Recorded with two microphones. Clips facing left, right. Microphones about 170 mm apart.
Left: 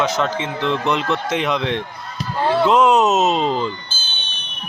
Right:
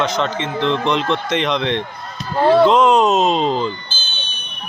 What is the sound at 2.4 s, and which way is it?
Speech, 60° right (ahead or behind).